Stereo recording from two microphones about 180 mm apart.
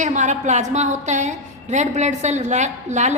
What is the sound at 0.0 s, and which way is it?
A woman's voice, 40° right (ahead or behind).